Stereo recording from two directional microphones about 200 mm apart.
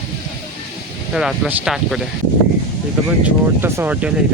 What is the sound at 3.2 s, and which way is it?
Speech, 10° right (ahead or behind).